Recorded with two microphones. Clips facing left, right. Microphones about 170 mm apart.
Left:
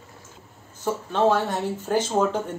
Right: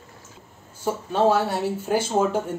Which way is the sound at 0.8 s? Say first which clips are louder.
Right 1 dB; 10° right (ahead or behind).